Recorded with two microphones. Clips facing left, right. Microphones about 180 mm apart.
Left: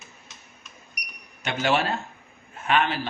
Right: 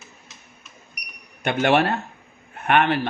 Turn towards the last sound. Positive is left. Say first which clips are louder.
# right 4 dB
turn(degrees=-60)  # may be behind; listen again after turning